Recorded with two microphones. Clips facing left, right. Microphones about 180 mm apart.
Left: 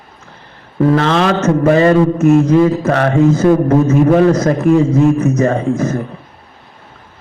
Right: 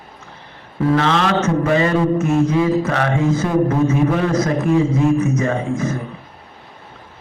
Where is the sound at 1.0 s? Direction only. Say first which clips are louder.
Left 4 dB; 40° left (ahead or behind).